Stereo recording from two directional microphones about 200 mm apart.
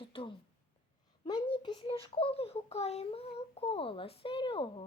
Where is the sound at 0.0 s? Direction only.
25° left (ahead or behind).